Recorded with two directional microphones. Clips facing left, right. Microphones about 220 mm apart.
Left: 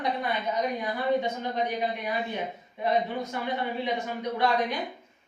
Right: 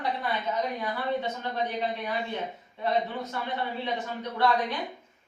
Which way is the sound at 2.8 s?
15° left (ahead or behind).